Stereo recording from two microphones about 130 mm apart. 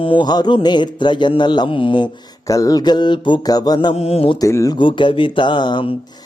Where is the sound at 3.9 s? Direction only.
50° left (ahead or behind).